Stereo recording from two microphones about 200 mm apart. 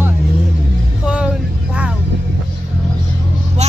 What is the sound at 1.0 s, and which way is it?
Vehicle, 5° right (ahead or behind).